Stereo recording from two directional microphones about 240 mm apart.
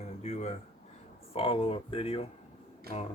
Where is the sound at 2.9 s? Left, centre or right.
Right.